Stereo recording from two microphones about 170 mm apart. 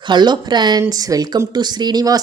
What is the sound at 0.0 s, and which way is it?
Speech, 25° right (ahead or behind).